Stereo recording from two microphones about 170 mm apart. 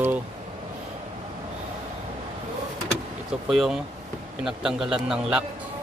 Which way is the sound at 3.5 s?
5° right (ahead or behind).